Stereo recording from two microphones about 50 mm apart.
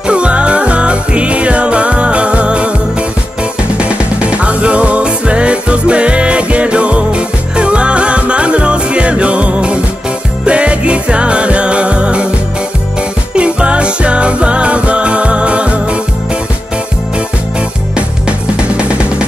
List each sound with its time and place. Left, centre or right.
0.0 s music: right
3.7 s music: right
13.3 s music: right
18.8 s music: right